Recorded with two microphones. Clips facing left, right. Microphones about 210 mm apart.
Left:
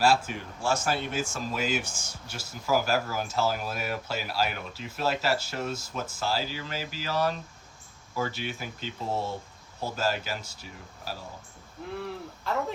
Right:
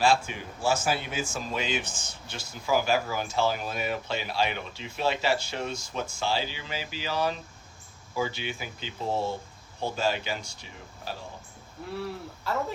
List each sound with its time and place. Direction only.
0.0 s speech: 5° left (ahead or behind)